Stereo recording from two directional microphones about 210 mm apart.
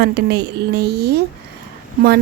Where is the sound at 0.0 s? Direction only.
50° right (ahead or behind).